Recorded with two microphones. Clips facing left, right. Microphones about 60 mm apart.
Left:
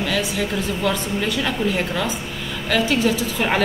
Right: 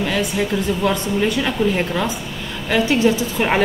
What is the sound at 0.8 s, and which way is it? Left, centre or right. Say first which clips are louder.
Speech: right 2 dB; right.